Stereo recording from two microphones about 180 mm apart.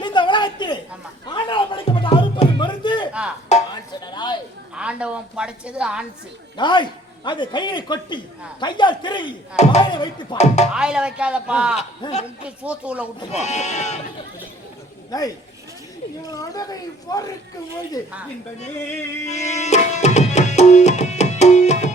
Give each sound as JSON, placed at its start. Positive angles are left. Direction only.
{"t": 0.0, "sound": "a sound", "side_deg": 25}
{"t": 1.3, "sound": "music", "side_deg": 25}
{"t": 3.1, "sound": "music", "side_deg": -5}
{"t": 4.0, "sound": "a sound", "side_deg": 25}
{"t": 4.7, "sound": "a woman's voice", "side_deg": -5}
{"t": 6.6, "sound": "a man's voice", "side_deg": 25}
{"t": 10.3, "sound": "speech", "side_deg": 40}
{"t": 10.8, "sound": "a man's voice", "side_deg": -5}
{"t": 12.0, "sound": "a man's voice", "side_deg": 25}
{"t": 12.5, "sound": "speech", "side_deg": -5}
{"t": 13.3, "sound": "speech", "side_deg": 40}
{"t": 16.2, "sound": "a man's voice", "side_deg": 20}
{"t": 19.3, "sound": "tabla", "side_deg": 40}